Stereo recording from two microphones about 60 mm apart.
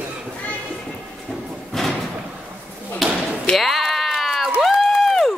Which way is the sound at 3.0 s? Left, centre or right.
Centre.